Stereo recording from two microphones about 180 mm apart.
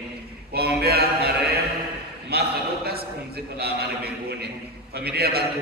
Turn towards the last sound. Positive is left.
turn(degrees=-60)  # may be behind; listen again after turning